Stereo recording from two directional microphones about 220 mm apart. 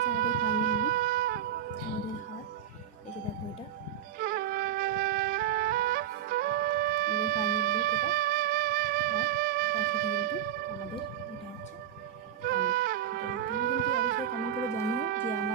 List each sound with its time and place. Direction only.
0.3 s wind instrument: 40° right (ahead or behind)
4.2 s flute: 40° right (ahead or behind)
12.4 s music: 45° right (ahead or behind)